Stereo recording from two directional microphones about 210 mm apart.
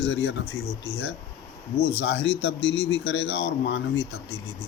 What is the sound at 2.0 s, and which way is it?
Speech, 50° left (ahead or behind).